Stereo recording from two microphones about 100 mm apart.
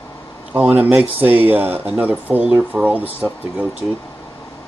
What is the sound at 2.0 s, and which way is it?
Speech, 15° right (ahead or behind).